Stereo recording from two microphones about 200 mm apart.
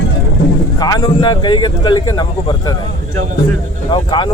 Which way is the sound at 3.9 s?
25° left (ahead or behind).